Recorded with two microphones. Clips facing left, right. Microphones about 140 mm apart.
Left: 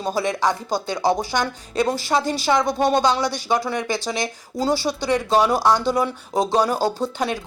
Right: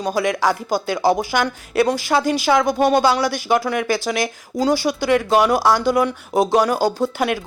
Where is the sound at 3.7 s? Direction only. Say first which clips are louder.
Right 4 dB; 25° left (ahead or behind).